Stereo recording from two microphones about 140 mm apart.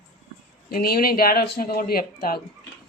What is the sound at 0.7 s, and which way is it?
Speech, 90° left.